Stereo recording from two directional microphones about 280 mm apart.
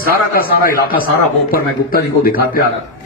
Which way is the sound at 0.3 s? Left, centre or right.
Left.